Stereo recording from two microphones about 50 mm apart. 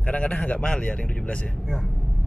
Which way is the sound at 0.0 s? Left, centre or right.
Left.